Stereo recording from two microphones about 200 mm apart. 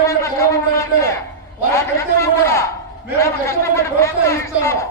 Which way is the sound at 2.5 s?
15° left (ahead or behind).